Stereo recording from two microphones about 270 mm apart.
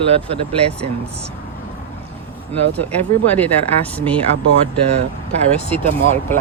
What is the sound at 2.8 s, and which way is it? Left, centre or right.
Speech, centre.